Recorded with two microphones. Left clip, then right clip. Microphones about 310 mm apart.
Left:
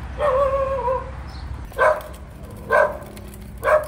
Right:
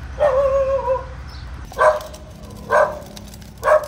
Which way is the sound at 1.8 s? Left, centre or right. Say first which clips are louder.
Right 3 dB; right.